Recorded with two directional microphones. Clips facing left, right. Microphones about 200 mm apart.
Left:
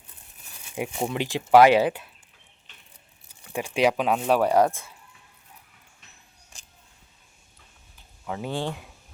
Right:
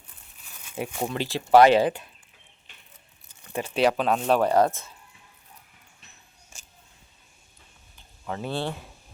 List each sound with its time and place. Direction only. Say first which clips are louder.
0.8 s speech: left 1 dB; 15° left (ahead or behind)
3.5 s speech: even; 10° left (ahead or behind)
8.3 s speech: even; 15° left (ahead or behind)